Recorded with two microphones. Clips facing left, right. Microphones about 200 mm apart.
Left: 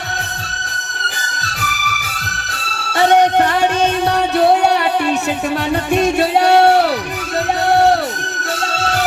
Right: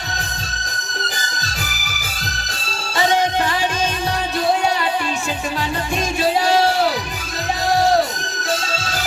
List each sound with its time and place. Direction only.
1.6 s music: 65° left (ahead or behind)
4.4 s a sound: 65° left (ahead or behind)
5.9 s music: 65° left (ahead or behind)